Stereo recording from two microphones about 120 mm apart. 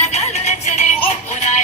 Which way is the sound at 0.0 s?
70° left (ahead or behind).